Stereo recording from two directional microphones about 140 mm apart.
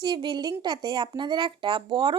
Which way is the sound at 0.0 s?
30° right (ahead or behind).